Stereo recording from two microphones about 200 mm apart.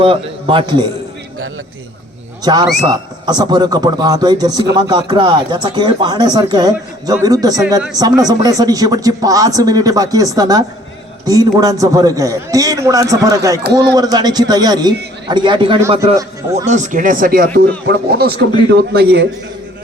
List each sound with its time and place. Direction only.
0.0 s speech: 25° right (ahead or behind)
2.4 s a man's voice: 20° right (ahead or behind)
16.6 s a man's voice: 35° right (ahead or behind); by 19.3 s 55° right (ahead or behind)